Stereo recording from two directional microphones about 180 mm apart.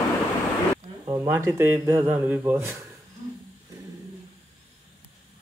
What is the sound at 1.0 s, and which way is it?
Speech, 20° right (ahead or behind).